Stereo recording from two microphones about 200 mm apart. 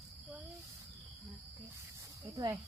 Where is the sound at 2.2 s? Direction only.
15° right (ahead or behind).